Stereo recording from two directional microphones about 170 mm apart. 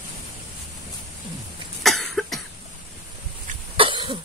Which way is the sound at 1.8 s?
Centre (ahead or behind).